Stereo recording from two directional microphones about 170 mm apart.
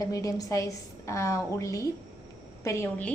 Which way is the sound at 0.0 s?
20° left (ahead or behind).